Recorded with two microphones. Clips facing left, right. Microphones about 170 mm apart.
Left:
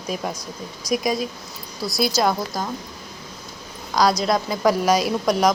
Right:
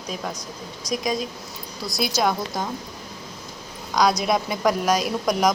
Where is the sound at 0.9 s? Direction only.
5° left (ahead or behind).